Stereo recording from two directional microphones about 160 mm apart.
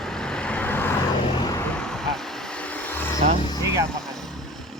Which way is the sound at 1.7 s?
5° left (ahead or behind).